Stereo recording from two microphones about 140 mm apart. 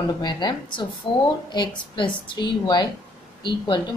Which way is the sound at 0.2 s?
30° left (ahead or behind).